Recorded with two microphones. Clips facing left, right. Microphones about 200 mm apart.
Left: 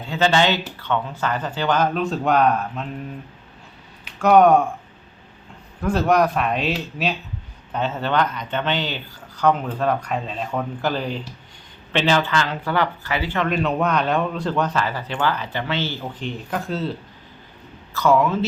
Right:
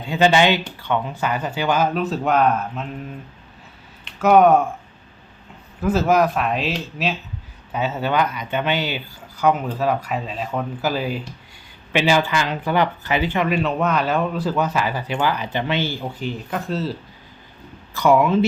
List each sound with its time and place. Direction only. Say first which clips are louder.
0.0 s speech: right 3 dB; 15° right (ahead or behind)
4.0 s speech: even; centre (ahead or behind)
5.8 s speech: right 1 dB; 5° right (ahead or behind)
13.5 s speech: even; centre (ahead or behind)
17.9 s speech: right 2 dB; 15° right (ahead or behind)